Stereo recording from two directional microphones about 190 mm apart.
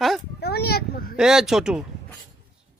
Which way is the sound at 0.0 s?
Centre (ahead or behind).